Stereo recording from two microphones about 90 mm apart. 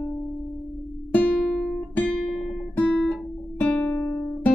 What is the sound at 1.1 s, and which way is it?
Music, 20° left (ahead or behind).